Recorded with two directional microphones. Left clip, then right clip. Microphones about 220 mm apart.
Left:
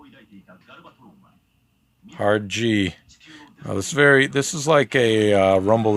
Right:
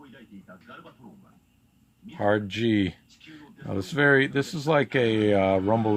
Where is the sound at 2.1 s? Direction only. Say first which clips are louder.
Left 4 dB; 25° left (ahead or behind).